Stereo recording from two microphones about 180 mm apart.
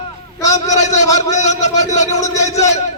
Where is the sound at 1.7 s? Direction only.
20° left (ahead or behind).